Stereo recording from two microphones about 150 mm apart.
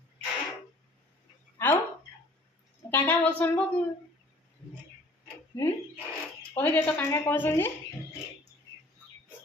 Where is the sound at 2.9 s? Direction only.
10° left (ahead or behind).